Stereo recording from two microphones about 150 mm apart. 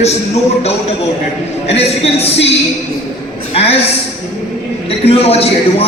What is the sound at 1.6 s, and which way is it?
Speech, 45° left (ahead or behind).